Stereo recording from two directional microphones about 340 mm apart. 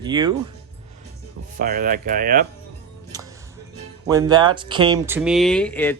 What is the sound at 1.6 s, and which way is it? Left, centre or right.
Speech, right.